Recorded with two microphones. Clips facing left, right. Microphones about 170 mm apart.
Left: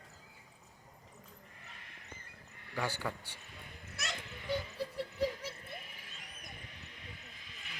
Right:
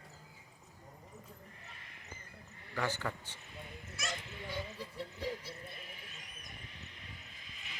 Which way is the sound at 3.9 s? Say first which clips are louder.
Right 1 dB; 65° left (ahead or behind).